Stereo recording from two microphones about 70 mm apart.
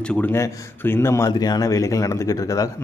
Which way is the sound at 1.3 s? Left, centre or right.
Left.